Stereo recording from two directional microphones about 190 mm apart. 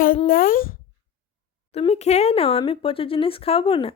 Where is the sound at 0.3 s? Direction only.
50° left (ahead or behind).